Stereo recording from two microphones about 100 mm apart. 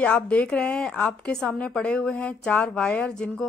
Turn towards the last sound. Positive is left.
turn(degrees=5)  # may be behind; listen again after turning